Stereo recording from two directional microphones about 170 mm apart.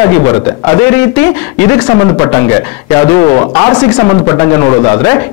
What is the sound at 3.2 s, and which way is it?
A man's voice, 25° left (ahead or behind).